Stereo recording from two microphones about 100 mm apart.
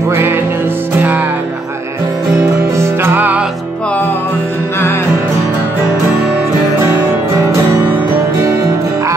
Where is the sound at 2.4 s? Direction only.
25° right (ahead or behind).